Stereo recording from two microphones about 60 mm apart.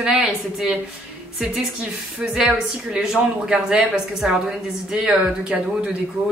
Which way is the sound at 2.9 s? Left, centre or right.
Centre.